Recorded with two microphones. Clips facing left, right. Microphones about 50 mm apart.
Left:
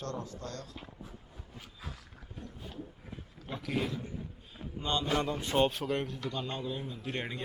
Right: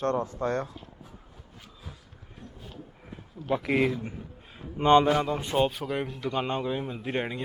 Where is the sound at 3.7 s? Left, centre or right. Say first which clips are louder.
Right 7 dB; right.